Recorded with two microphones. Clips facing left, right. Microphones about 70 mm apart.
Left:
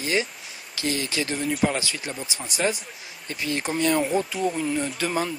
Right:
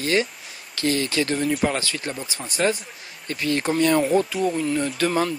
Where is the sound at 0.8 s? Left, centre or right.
Right.